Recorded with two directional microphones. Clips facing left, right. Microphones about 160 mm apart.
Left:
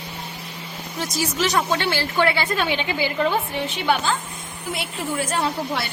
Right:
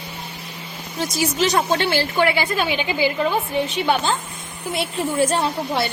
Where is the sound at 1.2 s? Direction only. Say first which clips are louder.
Right 2 dB; 20° right (ahead or behind).